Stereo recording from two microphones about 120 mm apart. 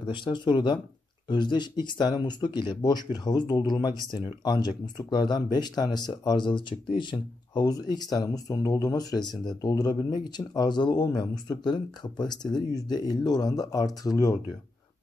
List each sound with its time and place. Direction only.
0.0 s speech: 40° left (ahead or behind)